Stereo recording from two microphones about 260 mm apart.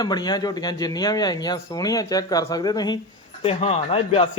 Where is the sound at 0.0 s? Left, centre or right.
Centre.